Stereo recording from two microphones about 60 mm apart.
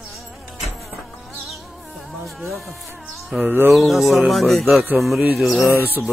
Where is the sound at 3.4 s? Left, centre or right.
Right.